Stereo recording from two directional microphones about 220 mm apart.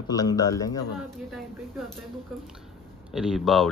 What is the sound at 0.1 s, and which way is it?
Speech, 15° left (ahead or behind).